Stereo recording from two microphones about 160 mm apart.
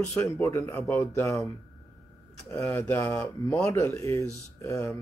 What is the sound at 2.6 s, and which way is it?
Speech, 15° left (ahead or behind).